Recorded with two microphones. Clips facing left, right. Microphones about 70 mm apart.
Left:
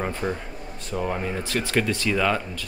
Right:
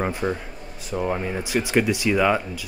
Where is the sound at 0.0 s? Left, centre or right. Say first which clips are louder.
Right 3 dB; centre.